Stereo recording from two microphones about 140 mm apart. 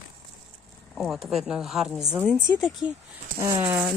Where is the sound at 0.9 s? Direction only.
Centre (ahead or behind).